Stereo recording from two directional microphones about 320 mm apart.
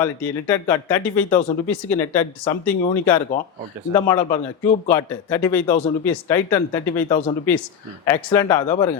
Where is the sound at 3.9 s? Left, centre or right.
Centre.